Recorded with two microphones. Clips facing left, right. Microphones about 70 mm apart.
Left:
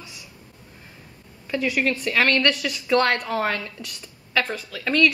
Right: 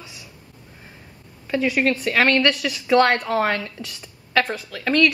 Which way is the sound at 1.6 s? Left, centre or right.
Right.